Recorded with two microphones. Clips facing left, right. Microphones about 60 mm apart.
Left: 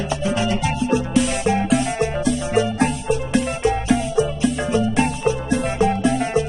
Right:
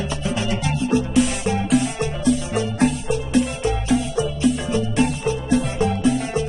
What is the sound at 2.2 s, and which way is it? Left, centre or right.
Music, left.